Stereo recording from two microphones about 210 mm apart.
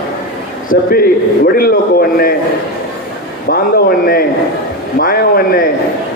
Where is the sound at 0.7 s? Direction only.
45° left (ahead or behind).